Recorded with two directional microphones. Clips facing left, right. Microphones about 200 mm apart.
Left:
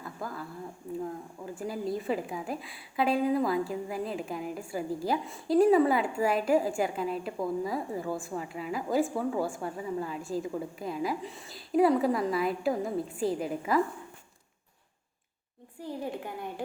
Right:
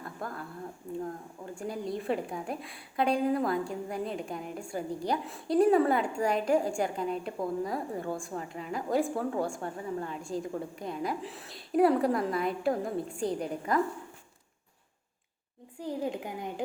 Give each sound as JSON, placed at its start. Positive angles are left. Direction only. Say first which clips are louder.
{"t": 0.0, "sound": "a sound", "louder": "left 1 dB", "side_deg": 0}
{"t": 1.5, "sound": "a woman's voice", "louder": "left 2 dB", "side_deg": 5}
{"t": 15.8, "sound": "a woman's voice", "louder": "right 2 dB", "side_deg": -15}